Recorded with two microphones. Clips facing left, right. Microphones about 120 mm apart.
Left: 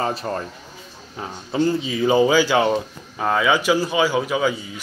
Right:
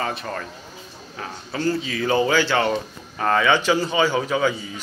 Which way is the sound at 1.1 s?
20° left (ahead or behind).